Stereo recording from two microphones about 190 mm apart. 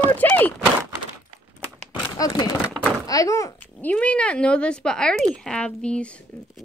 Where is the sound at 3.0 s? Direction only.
20° left (ahead or behind).